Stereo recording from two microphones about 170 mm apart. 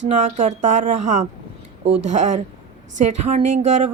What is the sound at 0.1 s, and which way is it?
Speech, 45° right (ahead or behind).